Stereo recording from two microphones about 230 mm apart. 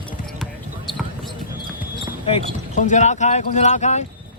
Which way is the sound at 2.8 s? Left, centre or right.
Left.